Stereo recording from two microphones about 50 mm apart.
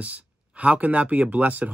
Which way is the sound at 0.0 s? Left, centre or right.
Right.